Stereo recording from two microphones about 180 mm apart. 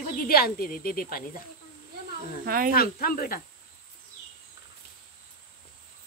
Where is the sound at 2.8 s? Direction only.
55° left (ahead or behind).